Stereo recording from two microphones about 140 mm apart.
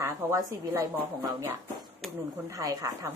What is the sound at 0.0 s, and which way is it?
Speech, 20° right (ahead or behind).